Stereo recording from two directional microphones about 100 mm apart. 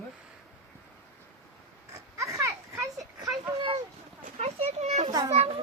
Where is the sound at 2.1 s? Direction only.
30° right (ahead or behind).